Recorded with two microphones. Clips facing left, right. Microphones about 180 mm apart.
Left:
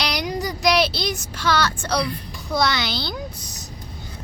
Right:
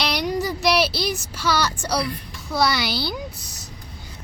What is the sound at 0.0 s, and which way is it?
Child singing, 5° right (ahead or behind).